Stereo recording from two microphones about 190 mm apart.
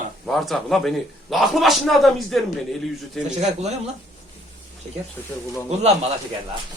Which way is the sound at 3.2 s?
35° right (ahead or behind).